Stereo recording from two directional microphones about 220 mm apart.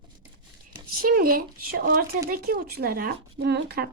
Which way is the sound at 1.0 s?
40° right (ahead or behind).